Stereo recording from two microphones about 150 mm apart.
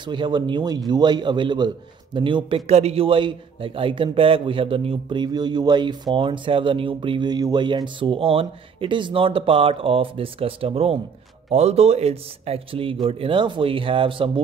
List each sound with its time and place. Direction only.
0.0 s a man's voice: 30° right (ahead or behind)